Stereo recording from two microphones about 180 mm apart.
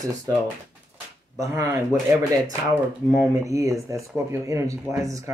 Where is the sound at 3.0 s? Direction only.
20° right (ahead or behind).